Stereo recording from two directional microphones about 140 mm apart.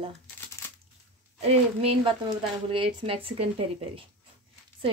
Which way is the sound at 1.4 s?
45° right (ahead or behind).